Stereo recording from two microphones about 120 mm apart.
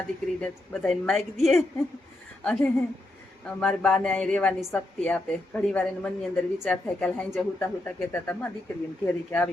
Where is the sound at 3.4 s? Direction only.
5° left (ahead or behind).